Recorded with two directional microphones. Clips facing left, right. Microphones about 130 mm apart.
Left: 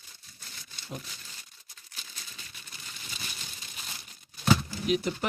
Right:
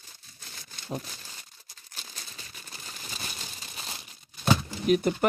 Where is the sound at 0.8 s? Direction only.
40° right (ahead or behind).